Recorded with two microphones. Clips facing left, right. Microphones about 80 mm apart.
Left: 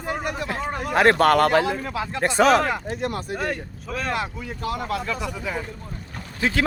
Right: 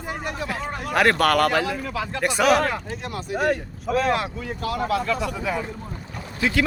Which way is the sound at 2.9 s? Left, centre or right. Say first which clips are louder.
Left 4 dB; left.